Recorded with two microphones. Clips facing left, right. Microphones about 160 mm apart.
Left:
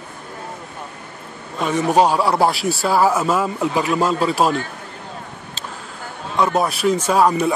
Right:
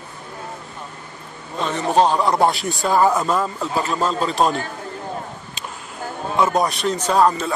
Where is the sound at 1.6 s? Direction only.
10° left (ahead or behind).